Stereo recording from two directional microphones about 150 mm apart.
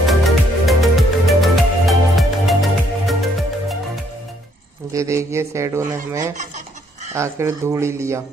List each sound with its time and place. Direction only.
0.0 s music: centre (ahead or behind)
4.9 s speech: 20° right (ahead or behind)